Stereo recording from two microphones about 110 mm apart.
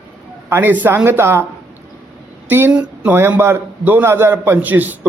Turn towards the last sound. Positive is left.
turn(degrees=-15)  # may be behind; listen again after turning